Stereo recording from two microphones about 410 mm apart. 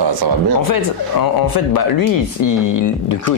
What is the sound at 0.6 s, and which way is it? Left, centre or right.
Speech, left.